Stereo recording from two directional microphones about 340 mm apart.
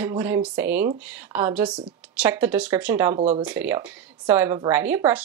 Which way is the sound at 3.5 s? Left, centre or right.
Centre.